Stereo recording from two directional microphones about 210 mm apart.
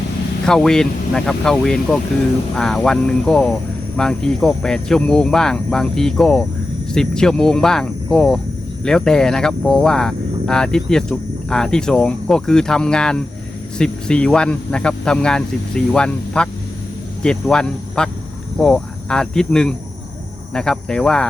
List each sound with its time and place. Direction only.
0.4 s speech: 5° left (ahead or behind)